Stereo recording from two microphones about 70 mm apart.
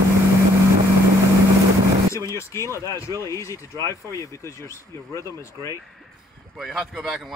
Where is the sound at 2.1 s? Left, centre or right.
Left.